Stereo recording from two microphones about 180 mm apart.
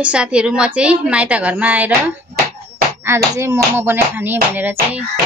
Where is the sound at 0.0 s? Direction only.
5° right (ahead or behind).